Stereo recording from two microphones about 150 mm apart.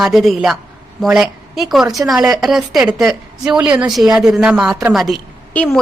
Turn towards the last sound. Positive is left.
turn(degrees=5)  # may be behind; listen again after turning